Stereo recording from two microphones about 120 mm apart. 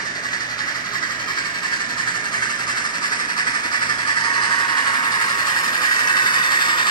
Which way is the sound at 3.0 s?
40° left (ahead or behind).